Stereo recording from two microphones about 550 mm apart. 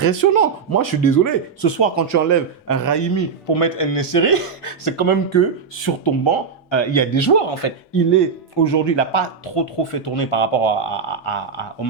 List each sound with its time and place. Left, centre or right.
0.0 s speech: left
3.5 s speech: left
8.1 s speech: left